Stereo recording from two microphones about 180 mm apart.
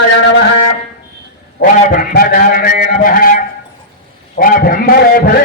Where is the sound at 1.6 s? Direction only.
50° left (ahead or behind).